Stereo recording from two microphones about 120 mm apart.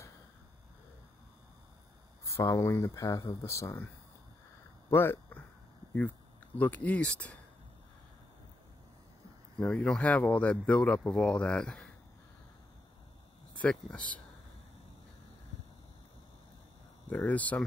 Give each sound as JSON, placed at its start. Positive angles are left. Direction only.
{"t": 2.3, "sound": "speech", "side_deg": 25}
{"t": 4.8, "sound": "speech", "side_deg": 20}
{"t": 9.6, "sound": "speech", "side_deg": 10}
{"t": 13.6, "sound": "speech", "side_deg": 10}
{"t": 17.1, "sound": "speech", "side_deg": 15}